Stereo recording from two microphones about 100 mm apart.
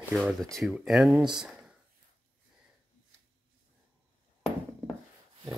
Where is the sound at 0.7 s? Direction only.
5° right (ahead or behind).